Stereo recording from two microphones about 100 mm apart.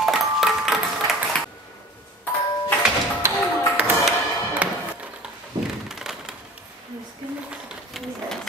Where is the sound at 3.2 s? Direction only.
30° right (ahead or behind).